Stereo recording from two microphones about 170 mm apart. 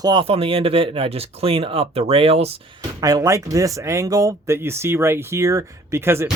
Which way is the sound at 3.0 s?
20° right (ahead or behind).